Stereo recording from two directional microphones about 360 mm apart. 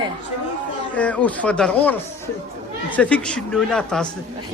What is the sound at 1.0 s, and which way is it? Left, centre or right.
Speech, centre.